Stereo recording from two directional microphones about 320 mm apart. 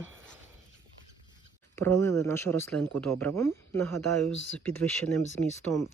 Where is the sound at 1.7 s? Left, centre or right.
Centre.